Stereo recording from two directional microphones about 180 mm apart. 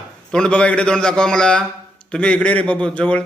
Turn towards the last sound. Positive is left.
turn(degrees=5)  # may be behind; listen again after turning